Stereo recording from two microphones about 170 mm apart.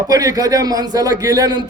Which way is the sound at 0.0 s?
20° right (ahead or behind).